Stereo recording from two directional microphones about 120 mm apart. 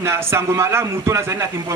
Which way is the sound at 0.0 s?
20° right (ahead or behind).